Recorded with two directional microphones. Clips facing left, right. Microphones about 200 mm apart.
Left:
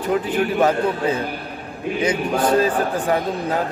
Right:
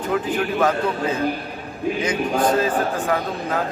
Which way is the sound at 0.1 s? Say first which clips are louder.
Left 2 dB; 30° left (ahead or behind).